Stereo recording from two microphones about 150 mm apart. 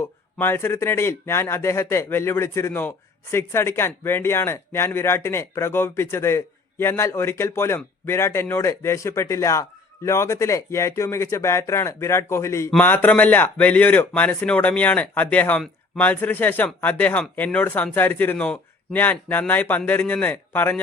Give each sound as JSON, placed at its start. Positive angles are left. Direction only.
{"t": 0.0, "sound": "speech", "side_deg": 15}